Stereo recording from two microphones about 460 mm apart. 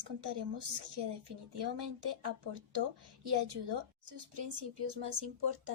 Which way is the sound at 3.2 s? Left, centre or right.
Right.